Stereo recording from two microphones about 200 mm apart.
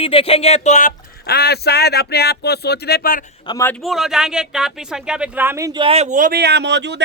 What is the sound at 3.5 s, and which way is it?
Speech, 15° left (ahead or behind).